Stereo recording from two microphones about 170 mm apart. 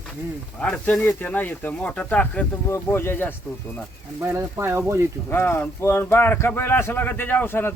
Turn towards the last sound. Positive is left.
turn(degrees=15)  # may be behind; listen again after turning